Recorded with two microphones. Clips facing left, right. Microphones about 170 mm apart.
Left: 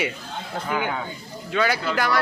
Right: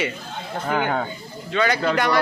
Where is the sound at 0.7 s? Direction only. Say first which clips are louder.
Right 4 dB; 50° right (ahead or behind).